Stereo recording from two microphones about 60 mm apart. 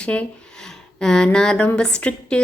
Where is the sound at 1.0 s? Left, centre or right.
Centre.